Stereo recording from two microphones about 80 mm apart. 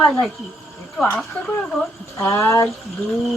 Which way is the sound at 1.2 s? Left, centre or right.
Centre.